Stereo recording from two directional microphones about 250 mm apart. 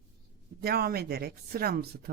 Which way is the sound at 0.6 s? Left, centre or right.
Right.